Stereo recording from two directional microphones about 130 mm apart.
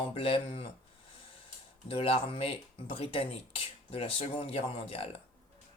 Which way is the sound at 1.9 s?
45° left (ahead or behind).